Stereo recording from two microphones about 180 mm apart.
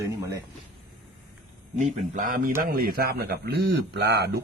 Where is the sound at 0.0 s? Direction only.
15° right (ahead or behind).